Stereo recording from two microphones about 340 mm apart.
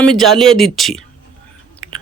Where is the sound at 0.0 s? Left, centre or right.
Centre.